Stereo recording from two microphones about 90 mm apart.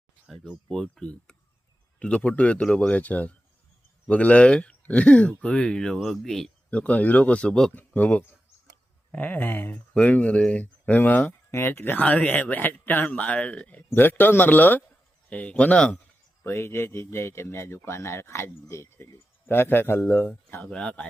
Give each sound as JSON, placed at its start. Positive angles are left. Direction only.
{"t": 0.3, "sound": "a man's voice", "side_deg": 5}
{"t": 16.4, "sound": "speech", "side_deg": 30}